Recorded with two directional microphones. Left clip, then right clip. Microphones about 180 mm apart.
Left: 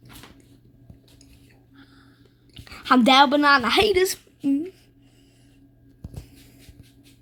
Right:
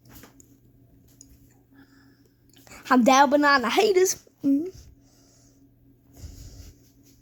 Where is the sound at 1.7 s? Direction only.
25° right (ahead or behind).